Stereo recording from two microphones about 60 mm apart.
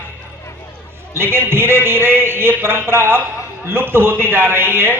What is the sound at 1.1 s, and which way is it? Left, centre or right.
A man's voice, right.